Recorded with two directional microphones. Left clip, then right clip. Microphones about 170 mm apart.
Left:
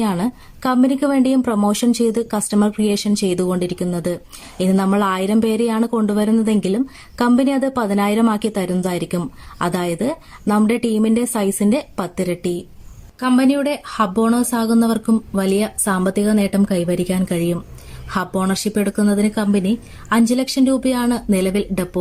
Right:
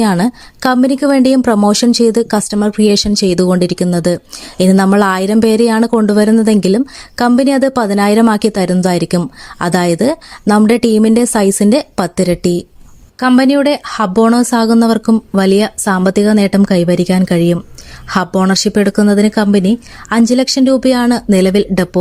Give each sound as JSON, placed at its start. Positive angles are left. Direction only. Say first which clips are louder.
{"t": 0.0, "sound": "a woman's voice", "louder": "right 8 dB", "side_deg": -40}